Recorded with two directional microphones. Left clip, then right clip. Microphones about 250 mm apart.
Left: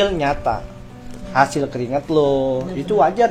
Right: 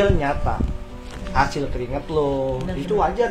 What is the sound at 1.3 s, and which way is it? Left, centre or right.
Speech, left.